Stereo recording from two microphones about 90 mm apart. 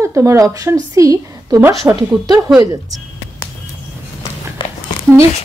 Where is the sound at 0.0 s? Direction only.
35° right (ahead or behind).